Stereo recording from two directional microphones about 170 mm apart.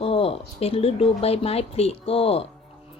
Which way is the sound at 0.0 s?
35° left (ahead or behind).